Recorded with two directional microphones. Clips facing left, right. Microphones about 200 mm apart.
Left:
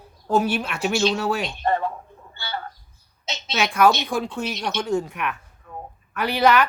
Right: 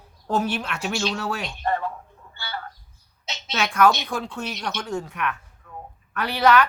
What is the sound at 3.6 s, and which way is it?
Speech, 10° left (ahead or behind).